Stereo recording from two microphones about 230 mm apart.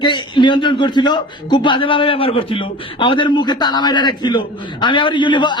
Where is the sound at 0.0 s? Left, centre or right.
Centre.